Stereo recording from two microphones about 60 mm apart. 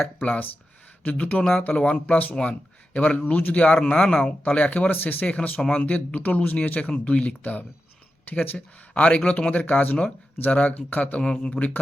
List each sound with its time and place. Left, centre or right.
0.2 s speech: left
5.5 s speech: centre
5.8 s speech: left
8.5 s speech: centre
11.2 s speech: centre